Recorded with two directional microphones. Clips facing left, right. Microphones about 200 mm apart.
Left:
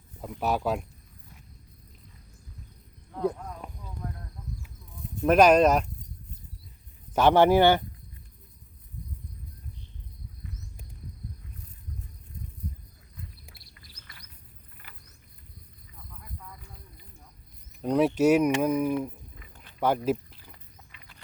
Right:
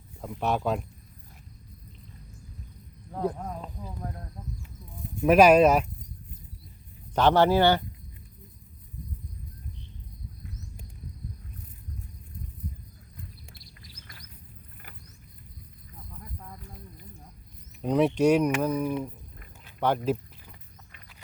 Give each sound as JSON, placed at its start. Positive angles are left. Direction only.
{"t": 0.2, "sound": "speech", "side_deg": 0}
{"t": 3.3, "sound": "speech", "side_deg": -40}
{"t": 3.8, "sound": "cricket", "side_deg": -35}
{"t": 5.2, "sound": "speech", "side_deg": -5}
{"t": 7.2, "sound": "speech", "side_deg": 15}
{"t": 13.6, "sound": "bird", "side_deg": 60}
{"t": 17.8, "sound": "speech", "side_deg": 0}